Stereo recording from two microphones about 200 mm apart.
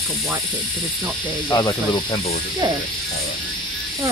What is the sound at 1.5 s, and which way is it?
Speech, 20° left (ahead or behind).